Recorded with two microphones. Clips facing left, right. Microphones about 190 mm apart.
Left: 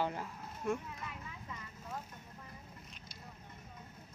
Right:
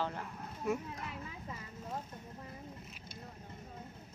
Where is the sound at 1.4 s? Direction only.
35° right (ahead or behind).